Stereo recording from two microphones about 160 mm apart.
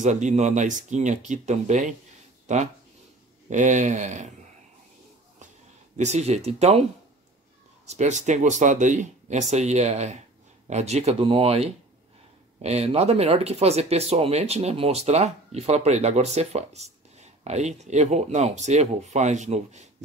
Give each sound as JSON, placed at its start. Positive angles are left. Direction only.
{"t": 0.0, "sound": "speech", "side_deg": -45}
{"t": 5.9, "sound": "speech", "side_deg": -45}